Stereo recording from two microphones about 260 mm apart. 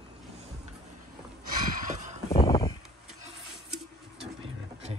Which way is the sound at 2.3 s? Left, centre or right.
Centre.